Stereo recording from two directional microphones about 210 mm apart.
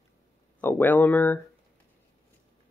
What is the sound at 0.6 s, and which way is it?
Speech, 10° left (ahead or behind).